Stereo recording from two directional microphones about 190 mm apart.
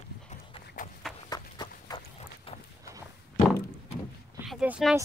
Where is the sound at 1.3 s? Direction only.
20° left (ahead or behind).